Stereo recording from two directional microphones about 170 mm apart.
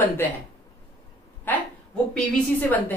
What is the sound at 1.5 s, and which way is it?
A woman's voice, 10° left (ahead or behind).